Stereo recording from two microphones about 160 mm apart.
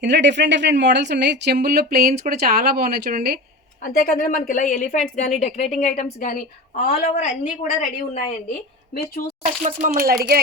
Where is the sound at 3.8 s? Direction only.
60° left (ahead or behind).